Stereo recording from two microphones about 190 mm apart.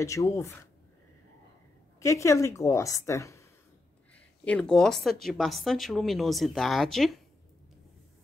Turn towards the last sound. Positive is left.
turn(degrees=0)  # may be behind; listen again after turning